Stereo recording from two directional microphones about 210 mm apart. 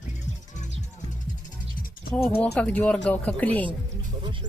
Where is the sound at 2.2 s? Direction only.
10° left (ahead or behind).